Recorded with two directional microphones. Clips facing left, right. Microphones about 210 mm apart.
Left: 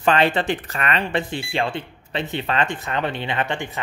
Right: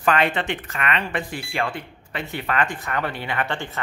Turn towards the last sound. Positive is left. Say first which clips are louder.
# left 2 dB
turn(degrees=15)  # may be behind; listen again after turning